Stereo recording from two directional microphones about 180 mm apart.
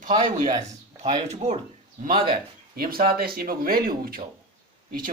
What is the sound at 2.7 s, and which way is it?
Speech, 55° right (ahead or behind).